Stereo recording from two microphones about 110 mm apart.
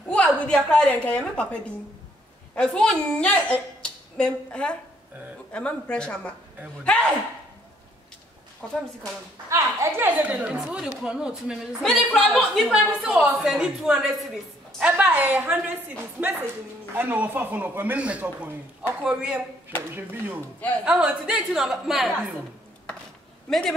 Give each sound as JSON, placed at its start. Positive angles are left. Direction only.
{"t": 0.0, "sound": "a woman's voice", "side_deg": 10}
{"t": 8.6, "sound": "a woman's voice", "side_deg": 5}
{"t": 9.5, "sound": "a woman's voice", "side_deg": -30}
{"t": 10.0, "sound": "speech", "side_deg": -15}
{"t": 11.8, "sound": "a woman's voice", "side_deg": 5}
{"t": 16.9, "sound": "speech", "side_deg": -20}